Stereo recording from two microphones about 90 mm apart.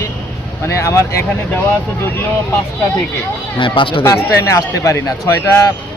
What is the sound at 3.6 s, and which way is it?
Speech, 75° left (ahead or behind).